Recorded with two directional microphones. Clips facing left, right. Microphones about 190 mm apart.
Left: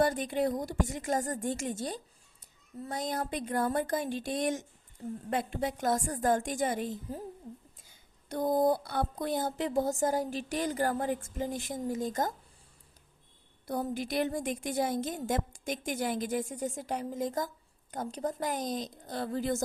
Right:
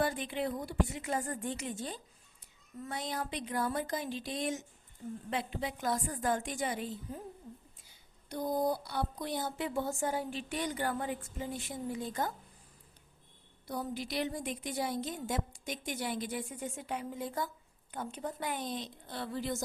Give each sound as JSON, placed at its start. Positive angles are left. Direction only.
{"t": 0.0, "sound": "speech", "side_deg": 45}
{"t": 8.3, "sound": "speech", "side_deg": 50}
{"t": 13.7, "sound": "a woman's voice", "side_deg": 50}